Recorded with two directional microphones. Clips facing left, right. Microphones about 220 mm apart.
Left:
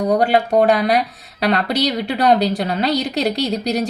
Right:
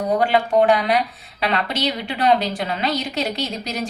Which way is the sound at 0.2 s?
40° left (ahead or behind).